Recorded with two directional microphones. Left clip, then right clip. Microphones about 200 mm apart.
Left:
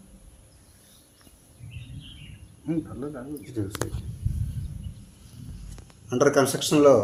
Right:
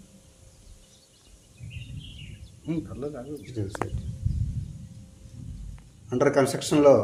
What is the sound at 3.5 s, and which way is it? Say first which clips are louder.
Speech: left 1 dB; 15° left (ahead or behind).